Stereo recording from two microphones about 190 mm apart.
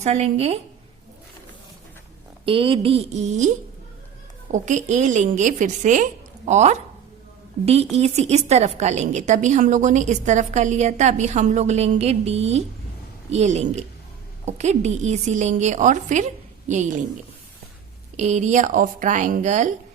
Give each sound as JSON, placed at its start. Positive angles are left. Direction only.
{"t": 0.0, "sound": "a woman's voice", "side_deg": -35}
{"t": 2.4, "sound": "a woman's voice", "side_deg": -30}
{"t": 4.5, "sound": "a woman's voice", "side_deg": -40}
{"t": 18.2, "sound": "a woman's voice", "side_deg": -40}